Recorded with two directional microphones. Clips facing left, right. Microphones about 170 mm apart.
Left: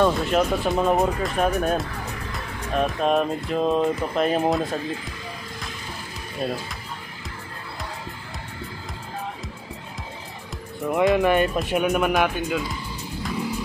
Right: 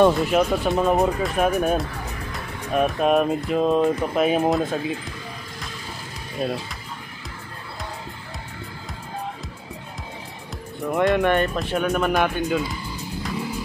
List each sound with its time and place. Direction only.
0.3 s speech: centre (ahead or behind)
6.4 s speech: centre (ahead or behind)
10.9 s speech: 5° left (ahead or behind)